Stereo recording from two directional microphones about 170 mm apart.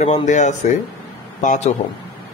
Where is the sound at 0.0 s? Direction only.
45° left (ahead or behind).